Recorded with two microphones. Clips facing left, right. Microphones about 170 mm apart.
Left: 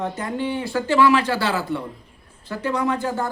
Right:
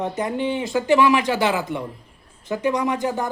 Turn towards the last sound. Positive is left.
turn(degrees=-15)  # may be behind; listen again after turning